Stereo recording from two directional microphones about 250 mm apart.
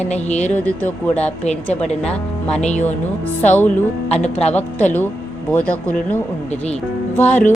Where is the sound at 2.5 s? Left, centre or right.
Left.